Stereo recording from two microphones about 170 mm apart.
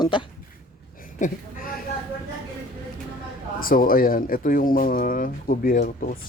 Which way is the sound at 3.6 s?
55° left (ahead or behind).